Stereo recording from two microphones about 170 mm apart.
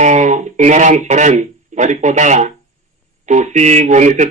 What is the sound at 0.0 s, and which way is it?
Speech, 45° right (ahead or behind).